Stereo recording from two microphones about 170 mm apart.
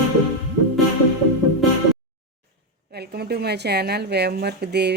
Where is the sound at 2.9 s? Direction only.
70° right (ahead or behind).